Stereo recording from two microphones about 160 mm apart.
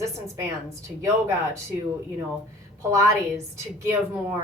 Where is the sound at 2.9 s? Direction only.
20° right (ahead or behind).